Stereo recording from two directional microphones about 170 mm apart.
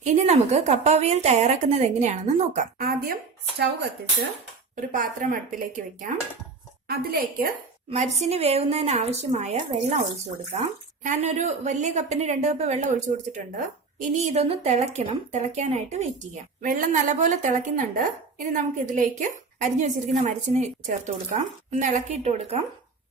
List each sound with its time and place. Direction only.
0.0 s a woman's voice: 45° right (ahead or behind)
4.8 s a woman's voice: 50° right (ahead or behind)
6.8 s a woman's voice: 65° right (ahead or behind)
7.9 s a woman's voice: 40° right (ahead or behind)
11.0 s a woman's voice: 45° right (ahead or behind)